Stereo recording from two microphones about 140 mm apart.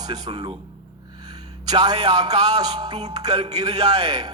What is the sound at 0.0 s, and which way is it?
A man's voice, 30° right (ahead or behind).